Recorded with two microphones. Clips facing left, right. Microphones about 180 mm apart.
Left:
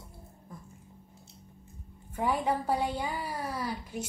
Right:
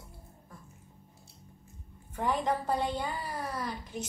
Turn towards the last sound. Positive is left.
turn(degrees=5)  # may be behind; listen again after turning